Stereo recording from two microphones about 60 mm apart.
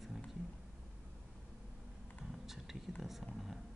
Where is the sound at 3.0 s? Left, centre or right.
Centre.